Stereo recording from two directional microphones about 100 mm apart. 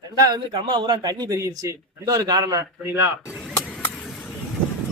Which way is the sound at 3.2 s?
10° right (ahead or behind).